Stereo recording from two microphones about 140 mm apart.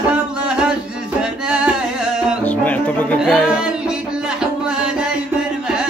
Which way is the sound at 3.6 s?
5° right (ahead or behind).